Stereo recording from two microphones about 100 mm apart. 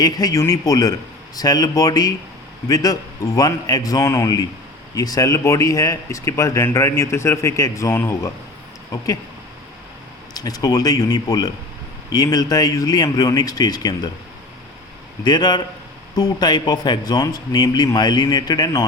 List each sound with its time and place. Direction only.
0.0 s speech: 40° left (ahead or behind)
10.3 s speech: 40° left (ahead or behind)
15.2 s speech: 45° left (ahead or behind)